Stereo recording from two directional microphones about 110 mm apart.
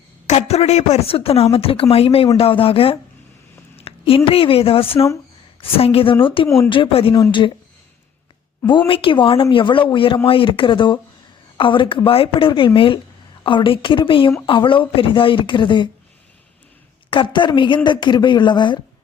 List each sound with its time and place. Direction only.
0.3 s a woman's voice: 80° left; by 7.6 s 50° left (ahead or behind)
8.9 s speech: 50° left (ahead or behind)
17.1 s speech: 50° left (ahead or behind)